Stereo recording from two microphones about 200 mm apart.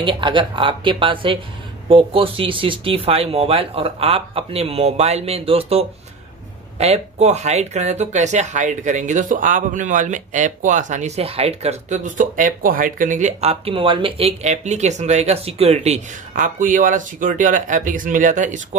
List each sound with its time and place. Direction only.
0.0 s speech: 25° right (ahead or behind)